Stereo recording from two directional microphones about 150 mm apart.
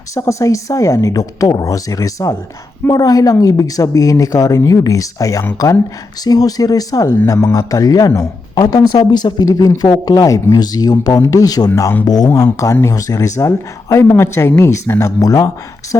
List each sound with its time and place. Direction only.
0.1 s speech: 20° left (ahead or behind)